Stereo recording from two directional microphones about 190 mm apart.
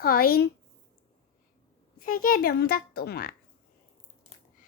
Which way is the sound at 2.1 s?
45° left (ahead or behind).